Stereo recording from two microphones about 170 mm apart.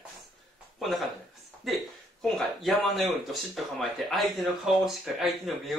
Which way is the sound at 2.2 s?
Centre (ahead or behind).